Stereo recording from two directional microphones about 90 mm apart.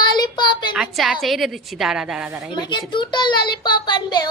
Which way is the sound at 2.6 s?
55° left (ahead or behind).